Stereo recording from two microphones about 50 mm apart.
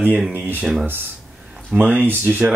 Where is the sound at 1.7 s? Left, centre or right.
Right.